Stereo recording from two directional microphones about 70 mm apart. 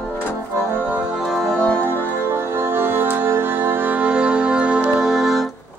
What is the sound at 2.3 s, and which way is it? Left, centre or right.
Music, right.